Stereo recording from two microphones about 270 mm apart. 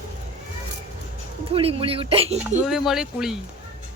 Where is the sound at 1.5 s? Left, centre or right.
Right.